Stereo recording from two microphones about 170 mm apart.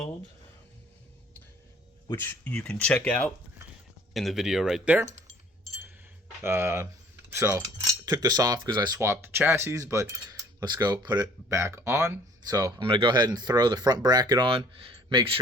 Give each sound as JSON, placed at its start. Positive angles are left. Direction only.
{"t": 2.4, "sound": "speech", "side_deg": 10}
{"t": 6.4, "sound": "speech", "side_deg": -15}
{"t": 7.3, "sound": "cutlery", "side_deg": -15}
{"t": 8.0, "sound": "speech", "side_deg": -20}
{"t": 9.0, "sound": "speech", "side_deg": -15}